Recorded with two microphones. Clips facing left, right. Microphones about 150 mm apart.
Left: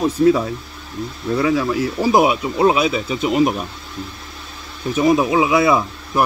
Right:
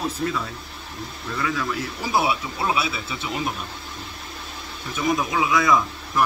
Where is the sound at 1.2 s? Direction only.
35° left (ahead or behind).